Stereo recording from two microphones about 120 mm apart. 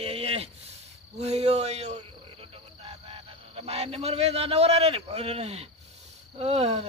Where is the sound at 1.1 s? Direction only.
65° right (ahead or behind).